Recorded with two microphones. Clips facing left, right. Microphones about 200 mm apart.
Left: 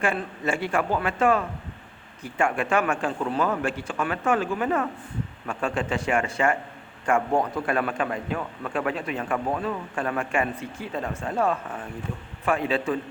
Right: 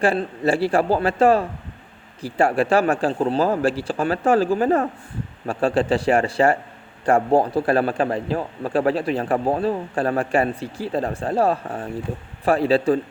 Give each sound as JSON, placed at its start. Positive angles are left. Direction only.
{"t": 0.0, "sound": "a man's voice", "side_deg": -35}